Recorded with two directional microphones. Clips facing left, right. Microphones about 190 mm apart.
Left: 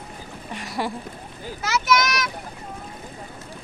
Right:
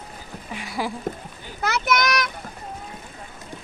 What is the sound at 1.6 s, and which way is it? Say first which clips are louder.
Speech: even; 60° right (ahead or behind).